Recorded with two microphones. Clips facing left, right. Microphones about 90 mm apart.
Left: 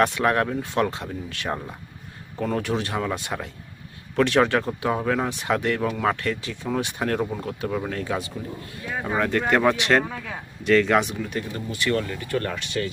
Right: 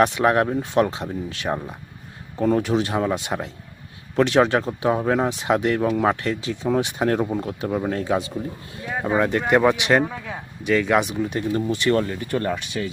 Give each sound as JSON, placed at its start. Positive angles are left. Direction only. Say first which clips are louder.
{"t": 0.0, "sound": "speech", "louder": "right 3 dB", "side_deg": -20}
{"t": 8.9, "sound": "speech", "louder": "right 3 dB", "side_deg": -15}
{"t": 11.2, "sound": "speech", "louder": "right 7 dB", "side_deg": -20}